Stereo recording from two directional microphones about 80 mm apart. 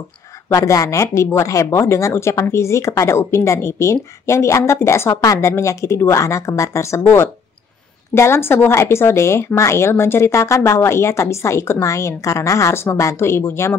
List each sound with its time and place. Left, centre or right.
0.5 s speech: left